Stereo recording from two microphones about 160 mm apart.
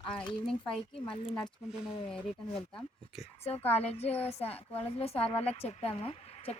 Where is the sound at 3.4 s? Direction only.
40° left (ahead or behind).